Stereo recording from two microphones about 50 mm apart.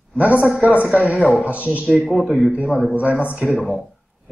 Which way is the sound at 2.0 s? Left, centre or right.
Centre.